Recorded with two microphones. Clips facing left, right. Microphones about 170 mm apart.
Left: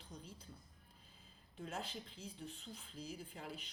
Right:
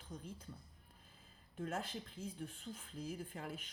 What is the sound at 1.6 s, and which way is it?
Speech, 50° right (ahead or behind).